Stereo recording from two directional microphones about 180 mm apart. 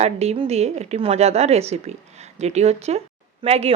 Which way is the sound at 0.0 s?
35° right (ahead or behind).